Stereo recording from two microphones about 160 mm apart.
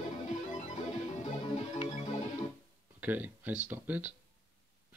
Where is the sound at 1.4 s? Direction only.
35° left (ahead or behind).